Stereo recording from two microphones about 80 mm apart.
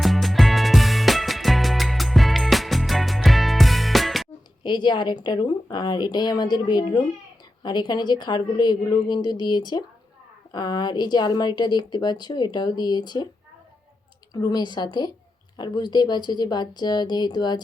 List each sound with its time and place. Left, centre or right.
0.0 s music: centre
4.6 s a woman's voice: left
14.5 s speech: left